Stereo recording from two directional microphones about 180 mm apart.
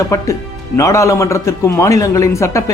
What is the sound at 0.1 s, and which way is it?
A man's voice, 15° left (ahead or behind).